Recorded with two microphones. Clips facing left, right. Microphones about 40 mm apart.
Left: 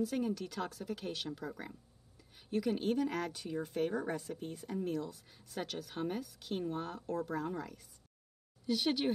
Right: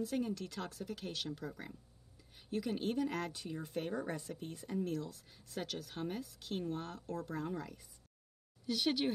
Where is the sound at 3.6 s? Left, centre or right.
Left.